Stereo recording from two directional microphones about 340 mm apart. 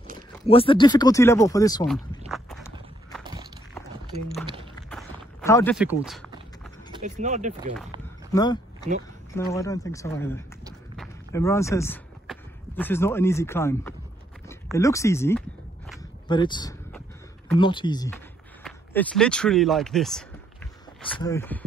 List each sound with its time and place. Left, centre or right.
0.5 s speech: centre
2.2 s walk: centre
4.8 s a sound: centre
7.0 s speech: right
8.3 s speech: centre
16.3 s a sound: centre
17.6 s speech: centre